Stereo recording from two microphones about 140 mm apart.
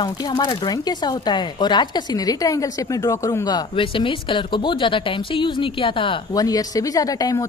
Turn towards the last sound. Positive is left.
turn(degrees=25)  # may be behind; listen again after turning